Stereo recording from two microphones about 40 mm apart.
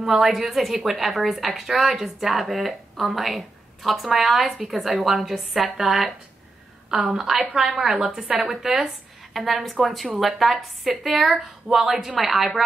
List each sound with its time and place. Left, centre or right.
0.2 s a woman's voice: centre; by 8.5 s right
8.5 s a woman's voice: centre